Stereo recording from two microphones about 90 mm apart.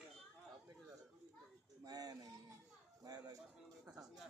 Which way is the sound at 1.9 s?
45° right (ahead or behind).